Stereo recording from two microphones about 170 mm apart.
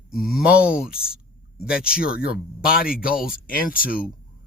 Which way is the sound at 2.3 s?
60° left (ahead or behind).